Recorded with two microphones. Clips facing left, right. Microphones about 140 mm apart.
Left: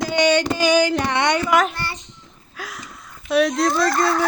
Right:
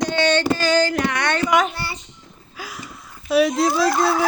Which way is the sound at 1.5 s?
5° right (ahead or behind).